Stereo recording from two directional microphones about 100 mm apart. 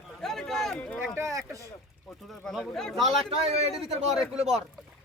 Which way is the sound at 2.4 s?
5° left (ahead or behind).